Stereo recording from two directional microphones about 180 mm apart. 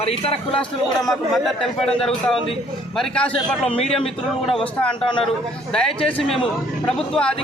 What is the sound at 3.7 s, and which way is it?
Speech, 30° left (ahead or behind).